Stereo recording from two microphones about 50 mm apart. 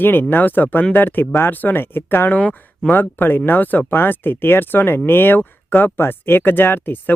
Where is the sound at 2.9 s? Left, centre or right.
Left.